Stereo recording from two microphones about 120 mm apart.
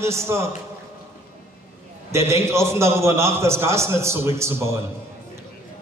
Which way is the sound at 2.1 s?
20° right (ahead or behind).